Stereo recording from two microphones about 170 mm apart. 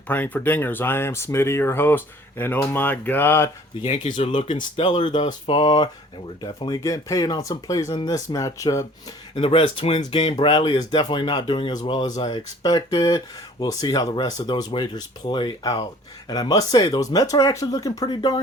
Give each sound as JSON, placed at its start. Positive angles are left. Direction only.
{"t": 0.1, "sound": "speech", "side_deg": 10}
{"t": 3.8, "sound": "speech", "side_deg": 40}
{"t": 4.3, "sound": "speech", "side_deg": 30}
{"t": 9.3, "sound": "speech", "side_deg": 35}